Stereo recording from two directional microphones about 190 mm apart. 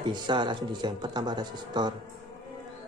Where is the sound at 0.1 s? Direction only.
25° right (ahead or behind).